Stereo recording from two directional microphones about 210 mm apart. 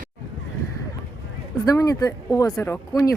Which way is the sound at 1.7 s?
15° left (ahead or behind).